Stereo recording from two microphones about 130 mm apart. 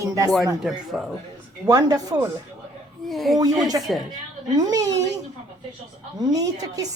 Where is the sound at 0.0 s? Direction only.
25° right (ahead or behind).